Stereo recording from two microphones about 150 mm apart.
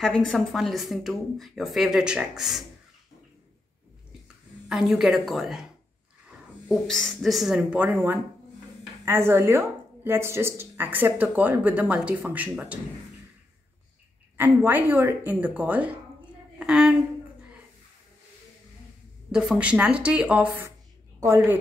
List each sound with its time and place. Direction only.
0.0 s a woman's voice: 5° left (ahead or behind)
4.6 s a woman's voice: centre (ahead or behind)
6.7 s a woman's voice: centre (ahead or behind)
14.3 s a woman's voice: 15° right (ahead or behind)
19.3 s speech: 5° right (ahead or behind)